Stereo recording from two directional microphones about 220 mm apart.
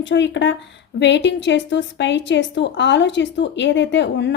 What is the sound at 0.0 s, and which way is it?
A woman's voice, 55° left (ahead or behind).